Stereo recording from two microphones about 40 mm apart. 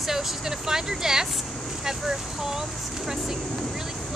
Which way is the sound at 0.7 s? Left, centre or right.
Centre.